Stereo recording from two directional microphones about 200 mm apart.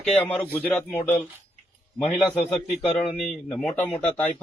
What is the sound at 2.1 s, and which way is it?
Speech, centre (ahead or behind).